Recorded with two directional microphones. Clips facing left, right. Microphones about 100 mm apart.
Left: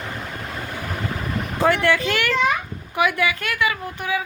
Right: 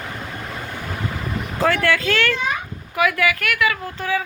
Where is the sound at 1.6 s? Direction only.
20° left (ahead or behind).